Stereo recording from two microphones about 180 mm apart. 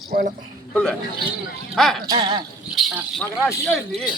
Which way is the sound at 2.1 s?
25° right (ahead or behind).